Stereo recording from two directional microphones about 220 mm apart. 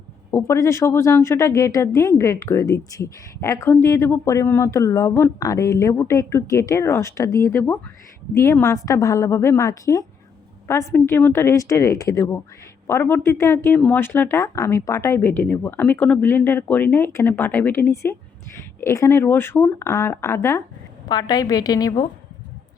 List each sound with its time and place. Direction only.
0.3 s speech: 15° left (ahead or behind)